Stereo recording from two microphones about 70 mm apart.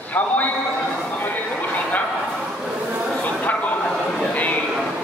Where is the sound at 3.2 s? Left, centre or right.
Left.